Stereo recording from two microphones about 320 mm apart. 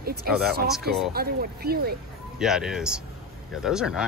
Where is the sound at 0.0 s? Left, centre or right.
Right.